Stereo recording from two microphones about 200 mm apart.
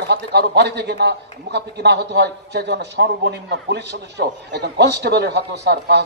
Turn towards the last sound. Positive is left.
turn(degrees=-55)  # may be behind; listen again after turning